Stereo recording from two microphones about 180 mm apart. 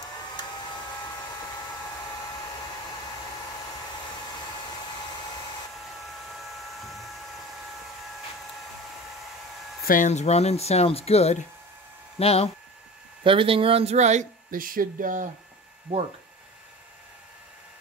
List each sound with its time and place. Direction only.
6.0 s hair dryer: centre (ahead or behind)
9.8 s speech: 45° left (ahead or behind)
13.2 s speech: 30° right (ahead or behind); by 15.2 s 50° right (ahead or behind)